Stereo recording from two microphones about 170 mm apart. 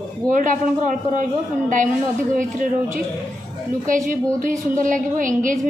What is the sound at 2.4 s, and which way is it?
A woman's voice, 50° right (ahead or behind).